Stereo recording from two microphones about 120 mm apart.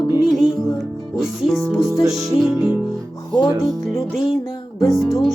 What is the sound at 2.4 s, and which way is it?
Music, 5° right (ahead or behind).